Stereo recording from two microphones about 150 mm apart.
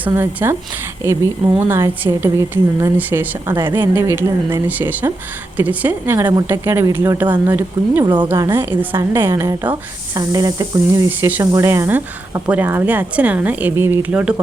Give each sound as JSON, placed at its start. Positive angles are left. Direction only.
{"t": 0.0, "sound": "speech", "side_deg": -15}
{"t": 8.0, "sound": "speech", "side_deg": -30}
{"t": 8.3, "sound": "speech", "side_deg": -20}